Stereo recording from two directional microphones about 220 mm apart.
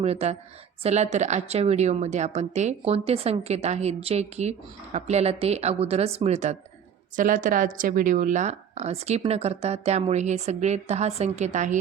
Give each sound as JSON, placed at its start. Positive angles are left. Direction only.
{"t": 0.0, "sound": "a woman's voice", "side_deg": -30}